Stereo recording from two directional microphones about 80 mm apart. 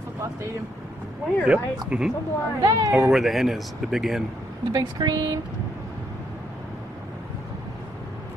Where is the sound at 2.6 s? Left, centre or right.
Right.